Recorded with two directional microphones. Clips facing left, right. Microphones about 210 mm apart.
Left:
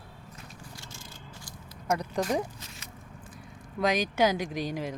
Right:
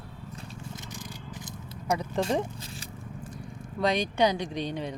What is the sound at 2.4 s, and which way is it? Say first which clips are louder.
Zipper: right 3 dB; 30° right (ahead or behind).